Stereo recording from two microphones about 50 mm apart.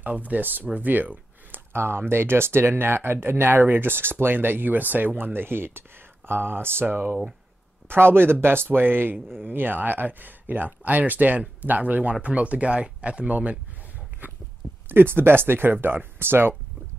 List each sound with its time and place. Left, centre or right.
0.0 s speech: right
0.7 s a sound: right
1.7 s speech: right
14.9 s speech: right